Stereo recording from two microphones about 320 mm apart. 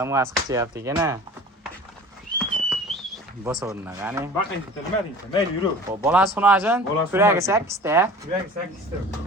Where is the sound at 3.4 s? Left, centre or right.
Centre.